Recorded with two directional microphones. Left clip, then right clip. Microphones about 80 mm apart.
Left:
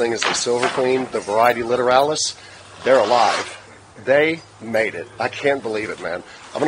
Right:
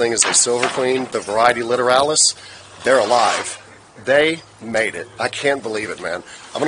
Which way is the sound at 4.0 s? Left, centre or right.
Right.